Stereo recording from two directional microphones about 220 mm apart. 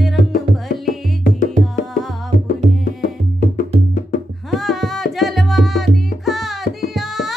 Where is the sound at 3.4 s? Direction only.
35° left (ahead or behind).